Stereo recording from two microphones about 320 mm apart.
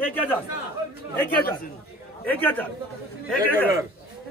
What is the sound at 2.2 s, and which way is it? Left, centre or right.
Speech, centre.